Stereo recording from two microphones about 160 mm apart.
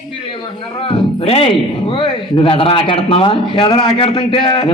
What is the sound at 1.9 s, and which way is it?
A man's voice, 30° left (ahead or behind).